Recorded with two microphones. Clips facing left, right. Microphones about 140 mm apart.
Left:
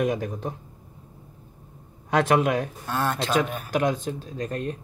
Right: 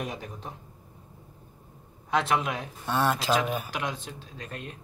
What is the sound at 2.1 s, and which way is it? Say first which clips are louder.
Speech: left 6 dB; 50° left (ahead or behind).